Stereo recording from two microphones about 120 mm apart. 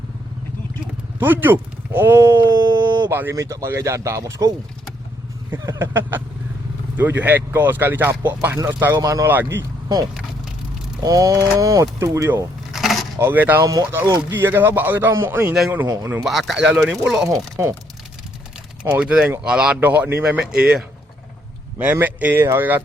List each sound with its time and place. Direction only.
1.2 s speech: 15° right (ahead or behind)
5.6 s speech: 30° right (ahead or behind)
5.9 s speech: 15° right (ahead or behind)
11.0 s speech: 30° right (ahead or behind)
12.7 s a sound: centre (ahead or behind)
13.1 s speech: 20° right (ahead or behind)
16.2 s speech: centre (ahead or behind)
17.6 s speech: 25° right (ahead or behind)
18.8 s speech: 10° right (ahead or behind)
20.2 s speech: 5° right (ahead or behind)